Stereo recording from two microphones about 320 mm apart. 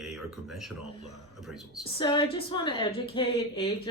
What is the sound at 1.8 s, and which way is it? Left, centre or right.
A woman's voice, centre.